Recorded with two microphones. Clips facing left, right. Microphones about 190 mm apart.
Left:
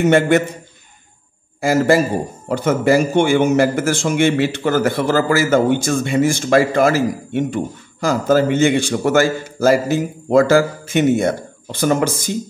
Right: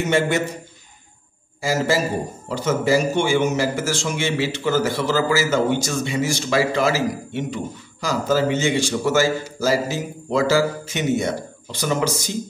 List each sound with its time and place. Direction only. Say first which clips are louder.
0.0 s speech: left 7 dB; 55° left (ahead or behind)
1.6 s speech: left 6 dB; 55° left (ahead or behind)